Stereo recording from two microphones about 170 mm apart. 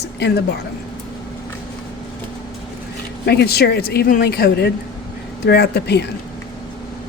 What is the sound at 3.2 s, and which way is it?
A woman's voice, 70° left (ahead or behind).